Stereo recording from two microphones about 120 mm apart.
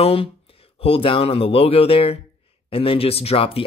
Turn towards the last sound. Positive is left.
turn(degrees=55)  # may be behind; listen again after turning